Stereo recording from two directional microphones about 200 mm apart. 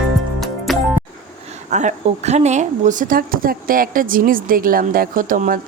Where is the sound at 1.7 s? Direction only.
35° right (ahead or behind).